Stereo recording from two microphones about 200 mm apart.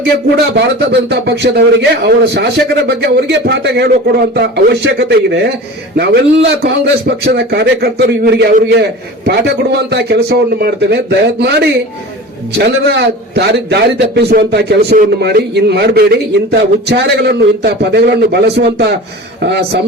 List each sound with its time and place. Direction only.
0.5 s a man's voice: 60° right (ahead or behind)